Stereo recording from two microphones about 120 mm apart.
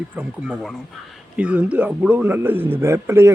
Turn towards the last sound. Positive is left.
turn(degrees=-20)  # may be behind; listen again after turning